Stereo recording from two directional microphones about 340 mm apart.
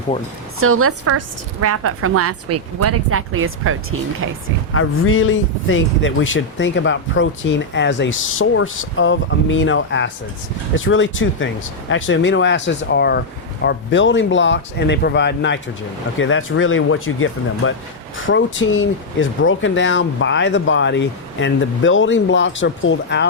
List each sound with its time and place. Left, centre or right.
0.6 s a woman's voice: right
4.7 s speech: left